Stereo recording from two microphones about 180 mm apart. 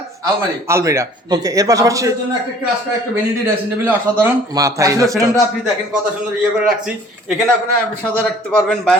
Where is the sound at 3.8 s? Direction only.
15° right (ahead or behind).